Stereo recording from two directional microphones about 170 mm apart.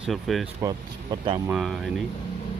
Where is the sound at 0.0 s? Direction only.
Centre (ahead or behind).